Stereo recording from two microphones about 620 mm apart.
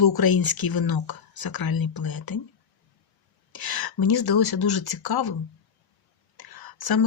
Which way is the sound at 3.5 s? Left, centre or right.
Left.